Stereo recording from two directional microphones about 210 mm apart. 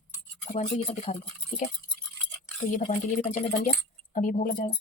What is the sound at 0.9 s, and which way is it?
Speech, 30° left (ahead or behind).